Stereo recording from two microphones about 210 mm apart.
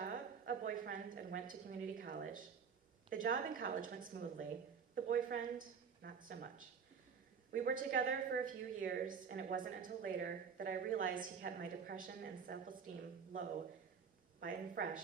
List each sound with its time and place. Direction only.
0.0 s a sound: 45° right (ahead or behind)
3.1 s a woman's voice: 40° right (ahead or behind)
7.5 s a woman's voice: 40° right (ahead or behind)
14.4 s a woman's voice: 40° right (ahead or behind)